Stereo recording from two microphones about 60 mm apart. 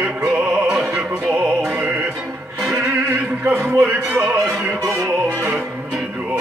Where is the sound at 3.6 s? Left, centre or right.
Right.